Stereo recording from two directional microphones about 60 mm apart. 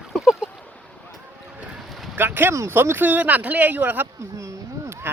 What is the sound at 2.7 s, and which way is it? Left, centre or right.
Speech, right.